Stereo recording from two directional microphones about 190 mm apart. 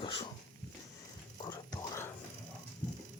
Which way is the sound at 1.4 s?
15° left (ahead or behind).